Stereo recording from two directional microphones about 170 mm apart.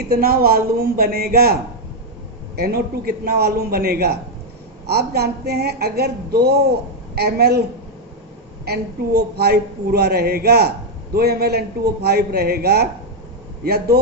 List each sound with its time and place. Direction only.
0.1 s a man's voice: 65° right (ahead or behind)
2.6 s a man's voice: 65° right (ahead or behind)
8.6 s speech: 70° right (ahead or behind)